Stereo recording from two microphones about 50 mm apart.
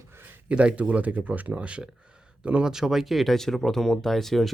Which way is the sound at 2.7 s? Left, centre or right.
Centre.